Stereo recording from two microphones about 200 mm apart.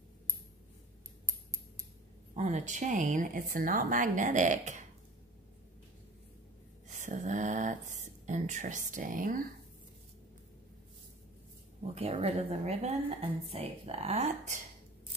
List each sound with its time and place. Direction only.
1.2 s scissors: 15° right (ahead or behind)
2.3 s a woman's voice: 35° right (ahead or behind)
6.9 s a sound: 35° right (ahead or behind)
11.9 s a woman's voice: 30° right (ahead or behind)